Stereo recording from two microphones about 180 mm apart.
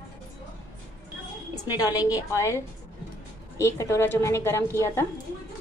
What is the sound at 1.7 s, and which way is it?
A woman's voice, 20° left (ahead or behind).